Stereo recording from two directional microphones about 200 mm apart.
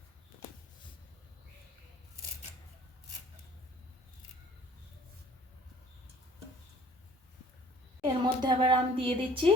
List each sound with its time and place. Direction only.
8.0 s a woman's voice: 20° right (ahead or behind)